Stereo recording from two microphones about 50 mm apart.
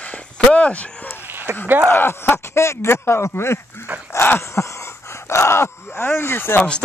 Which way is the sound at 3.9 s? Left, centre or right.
Right.